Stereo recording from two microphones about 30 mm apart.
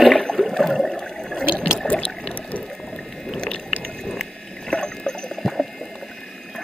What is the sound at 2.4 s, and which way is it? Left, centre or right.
Ratchet, left.